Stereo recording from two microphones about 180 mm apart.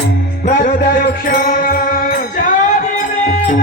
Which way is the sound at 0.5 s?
45° left (ahead or behind).